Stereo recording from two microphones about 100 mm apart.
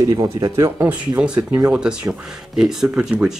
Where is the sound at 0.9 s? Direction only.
10° right (ahead or behind).